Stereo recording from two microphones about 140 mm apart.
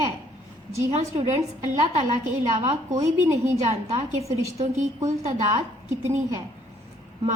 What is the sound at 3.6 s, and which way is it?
A woman's voice, 50° right (ahead or behind).